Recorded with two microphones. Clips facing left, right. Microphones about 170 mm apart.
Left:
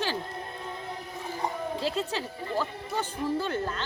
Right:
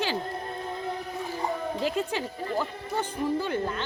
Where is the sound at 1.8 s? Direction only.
15° right (ahead or behind).